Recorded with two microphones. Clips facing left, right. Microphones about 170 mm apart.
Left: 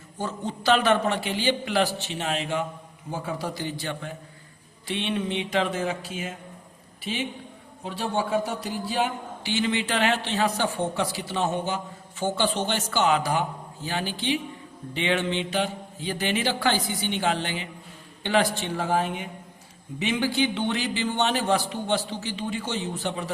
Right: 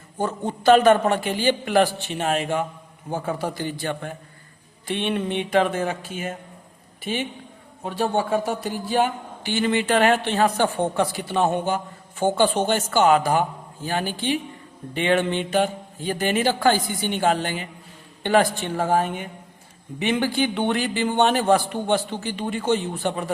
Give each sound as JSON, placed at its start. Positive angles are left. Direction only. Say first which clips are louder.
{"t": 0.2, "sound": "a man's voice", "louder": "right 5 dB", "side_deg": -50}